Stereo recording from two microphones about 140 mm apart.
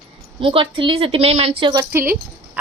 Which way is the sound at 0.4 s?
40° right (ahead or behind).